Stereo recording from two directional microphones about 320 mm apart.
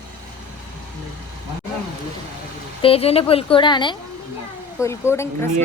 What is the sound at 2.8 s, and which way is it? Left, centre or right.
A woman's voice, centre.